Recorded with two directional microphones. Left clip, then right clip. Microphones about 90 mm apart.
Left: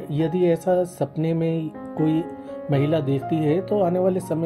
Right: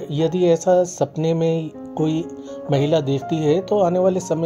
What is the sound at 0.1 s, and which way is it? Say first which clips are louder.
Speech: right 4 dB; 45° right (ahead or behind).